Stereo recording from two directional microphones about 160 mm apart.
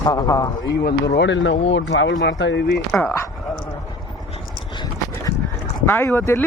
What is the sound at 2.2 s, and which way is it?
Speech, 90° left.